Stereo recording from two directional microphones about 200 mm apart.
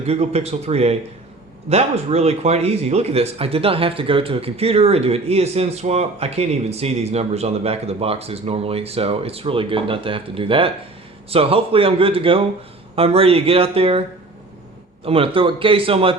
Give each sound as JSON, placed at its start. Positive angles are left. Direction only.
{"t": 0.1, "sound": "speech", "side_deg": -30}
{"t": 15.0, "sound": "speech", "side_deg": -25}